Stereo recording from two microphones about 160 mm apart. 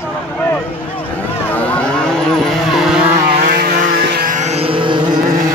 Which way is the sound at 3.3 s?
75° right (ahead or behind).